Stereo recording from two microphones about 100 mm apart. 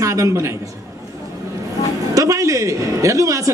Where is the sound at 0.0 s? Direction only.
30° right (ahead or behind).